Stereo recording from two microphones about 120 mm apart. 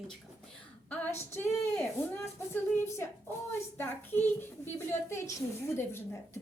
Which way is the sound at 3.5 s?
15° left (ahead or behind).